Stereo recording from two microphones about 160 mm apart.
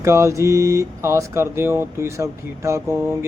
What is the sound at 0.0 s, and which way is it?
Speech, 20° right (ahead or behind).